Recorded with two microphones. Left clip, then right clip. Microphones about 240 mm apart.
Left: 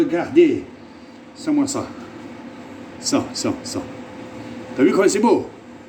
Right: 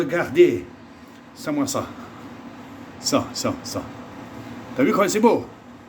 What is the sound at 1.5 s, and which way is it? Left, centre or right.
Speech, right.